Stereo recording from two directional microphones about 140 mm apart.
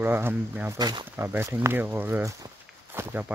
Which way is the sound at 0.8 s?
30° right (ahead or behind).